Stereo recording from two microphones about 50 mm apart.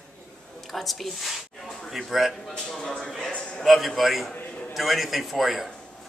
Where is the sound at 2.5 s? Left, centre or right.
Centre.